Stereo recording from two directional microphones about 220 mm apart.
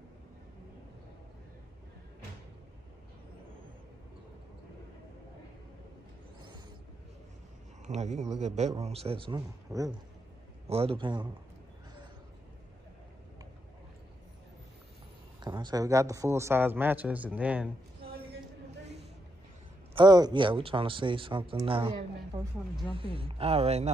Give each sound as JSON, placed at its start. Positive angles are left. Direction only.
{"t": 7.8, "sound": "speech", "side_deg": -30}
{"t": 15.4, "sound": "a man's voice", "side_deg": -20}
{"t": 20.0, "sound": "speech", "side_deg": -20}